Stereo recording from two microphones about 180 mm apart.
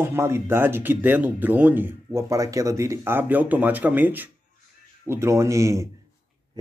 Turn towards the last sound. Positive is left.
turn(degrees=-15)  # may be behind; listen again after turning